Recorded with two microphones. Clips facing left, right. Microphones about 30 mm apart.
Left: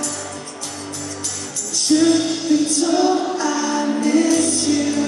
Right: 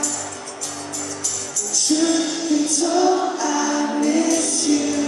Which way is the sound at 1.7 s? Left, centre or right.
Centre.